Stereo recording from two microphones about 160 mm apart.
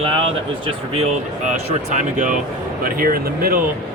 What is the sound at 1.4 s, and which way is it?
Speech, 50° right (ahead or behind).